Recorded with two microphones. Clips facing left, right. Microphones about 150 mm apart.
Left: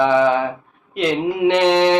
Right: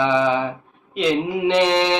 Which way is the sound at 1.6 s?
60° left (ahead or behind).